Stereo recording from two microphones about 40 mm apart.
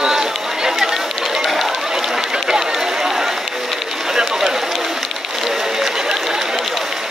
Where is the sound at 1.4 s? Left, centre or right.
Centre.